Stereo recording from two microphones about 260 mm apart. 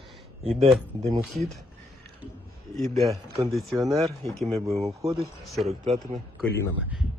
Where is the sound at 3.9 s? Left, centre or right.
Centre.